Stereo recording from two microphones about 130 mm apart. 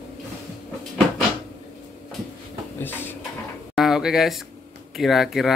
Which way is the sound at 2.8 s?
15° left (ahead or behind).